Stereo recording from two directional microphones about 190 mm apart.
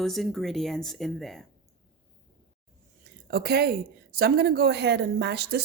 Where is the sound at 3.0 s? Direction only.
55° right (ahead or behind).